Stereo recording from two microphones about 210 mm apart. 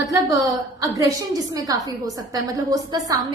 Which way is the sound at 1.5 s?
15° right (ahead or behind).